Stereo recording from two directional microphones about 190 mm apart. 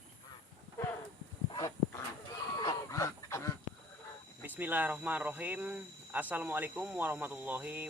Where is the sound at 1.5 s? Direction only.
20° left (ahead or behind).